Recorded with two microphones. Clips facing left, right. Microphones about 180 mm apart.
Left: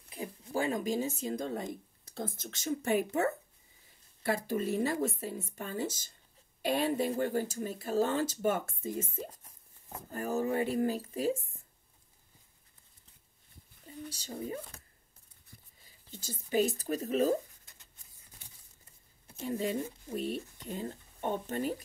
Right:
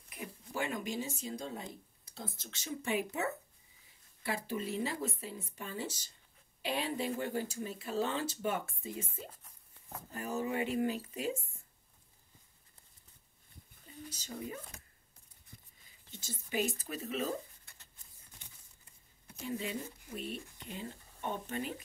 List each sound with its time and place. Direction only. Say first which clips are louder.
0.1 s a sound: left 6 dB; 30° left (ahead or behind)
1.2 s speech: left 6 dB; 50° left (ahead or behind)
9.8 s a sound: right 1 dB; 70° right (ahead or behind)
10.1 s speech: left 5 dB; 45° left (ahead or behind)
13.8 s speech: left 4 dB; 30° left (ahead or behind)
15.8 s speech: left 5 dB; 40° left (ahead or behind)
19.4 s speech: left 5 dB; 40° left (ahead or behind)